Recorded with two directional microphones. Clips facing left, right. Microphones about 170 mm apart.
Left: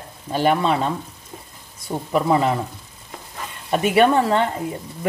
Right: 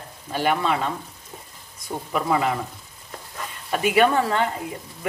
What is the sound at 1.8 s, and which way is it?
Speech, 30° left (ahead or behind).